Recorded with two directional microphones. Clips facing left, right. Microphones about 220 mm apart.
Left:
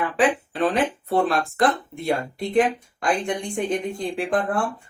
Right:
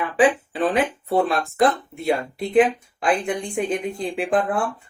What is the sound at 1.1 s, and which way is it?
Speech, centre (ahead or behind).